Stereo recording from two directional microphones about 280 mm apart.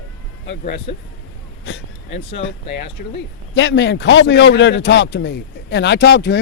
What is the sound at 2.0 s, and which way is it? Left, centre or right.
A man's voice, left.